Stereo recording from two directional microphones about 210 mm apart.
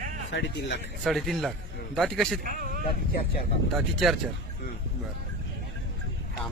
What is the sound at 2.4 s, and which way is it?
Speech, 45° right (ahead or behind).